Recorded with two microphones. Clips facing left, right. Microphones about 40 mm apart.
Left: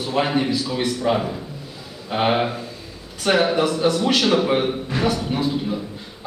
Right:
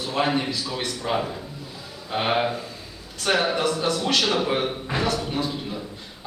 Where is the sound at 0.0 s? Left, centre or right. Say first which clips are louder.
Left 3 dB; centre.